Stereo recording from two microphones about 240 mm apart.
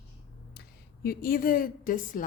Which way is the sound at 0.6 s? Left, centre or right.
Left.